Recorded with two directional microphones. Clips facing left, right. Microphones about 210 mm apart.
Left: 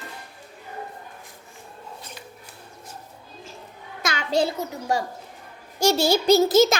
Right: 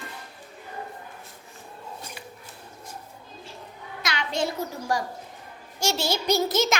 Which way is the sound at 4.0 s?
45° left (ahead or behind).